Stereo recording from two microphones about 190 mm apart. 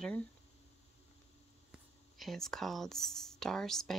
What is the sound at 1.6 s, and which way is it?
Speech, centre (ahead or behind).